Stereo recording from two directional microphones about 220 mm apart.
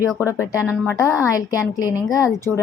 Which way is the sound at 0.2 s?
10° left (ahead or behind).